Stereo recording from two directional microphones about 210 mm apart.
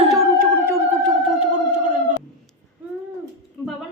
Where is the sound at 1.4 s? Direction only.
35° right (ahead or behind).